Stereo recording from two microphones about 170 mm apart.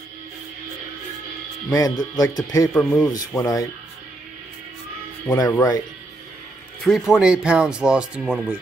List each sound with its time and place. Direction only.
1.7 s speech: 20° left (ahead or behind)
5.3 s speech: 20° left (ahead or behind)
6.8 s speech: centre (ahead or behind)